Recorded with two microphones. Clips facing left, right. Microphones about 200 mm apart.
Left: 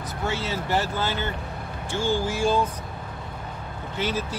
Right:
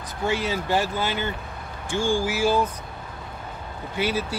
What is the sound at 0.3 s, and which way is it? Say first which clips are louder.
Speech: right 3 dB; 15° right (ahead or behind).